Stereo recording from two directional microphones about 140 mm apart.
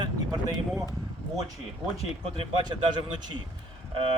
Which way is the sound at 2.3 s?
35° right (ahead or behind).